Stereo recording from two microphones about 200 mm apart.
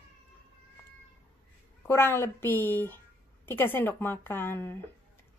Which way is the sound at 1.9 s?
10° left (ahead or behind).